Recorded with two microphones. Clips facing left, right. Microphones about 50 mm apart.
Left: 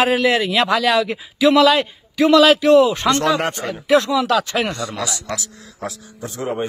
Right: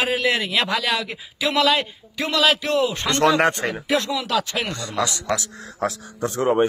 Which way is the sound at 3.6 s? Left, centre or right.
Right.